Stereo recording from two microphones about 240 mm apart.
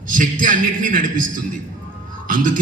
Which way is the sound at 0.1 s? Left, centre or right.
Right.